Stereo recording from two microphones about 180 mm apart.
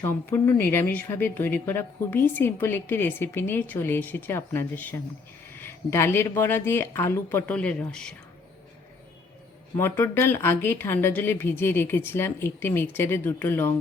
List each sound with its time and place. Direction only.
0.0 s a woman's voice: 10° left (ahead or behind)
9.7 s a woman's voice: 15° left (ahead or behind)